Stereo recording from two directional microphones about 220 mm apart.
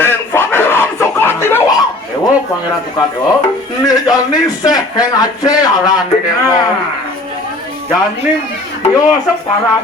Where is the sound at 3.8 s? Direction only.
15° left (ahead or behind).